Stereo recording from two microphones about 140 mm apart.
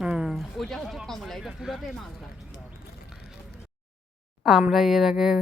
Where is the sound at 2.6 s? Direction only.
5° right (ahead or behind).